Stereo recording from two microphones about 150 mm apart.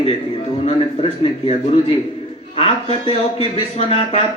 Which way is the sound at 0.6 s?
45° left (ahead or behind).